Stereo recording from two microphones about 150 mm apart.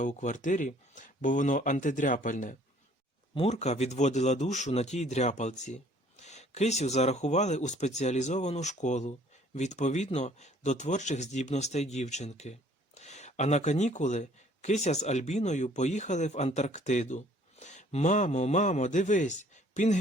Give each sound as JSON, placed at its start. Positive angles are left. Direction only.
{"t": 0.0, "sound": "speech", "side_deg": 55}
{"t": 3.3, "sound": "a man's voice", "side_deg": 45}